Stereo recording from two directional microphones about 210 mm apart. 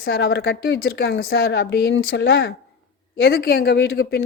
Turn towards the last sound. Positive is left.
turn(degrees=50)  # may be behind; listen again after turning